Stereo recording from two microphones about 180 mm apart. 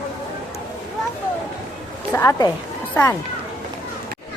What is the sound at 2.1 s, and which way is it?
Speech, 15° left (ahead or behind).